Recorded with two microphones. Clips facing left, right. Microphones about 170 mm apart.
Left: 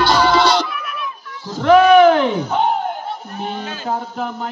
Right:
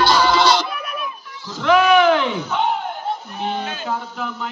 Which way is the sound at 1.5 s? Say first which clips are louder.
Left 5 dB; 50° left (ahead or behind).